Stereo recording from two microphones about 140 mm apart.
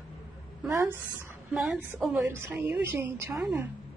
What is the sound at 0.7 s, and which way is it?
Speech, 20° right (ahead or behind).